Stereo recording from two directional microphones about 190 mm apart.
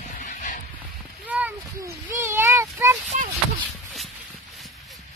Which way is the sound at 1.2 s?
10° right (ahead or behind).